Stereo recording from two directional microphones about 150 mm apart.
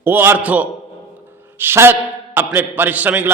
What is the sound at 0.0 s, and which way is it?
A man's voice, 15° right (ahead or behind).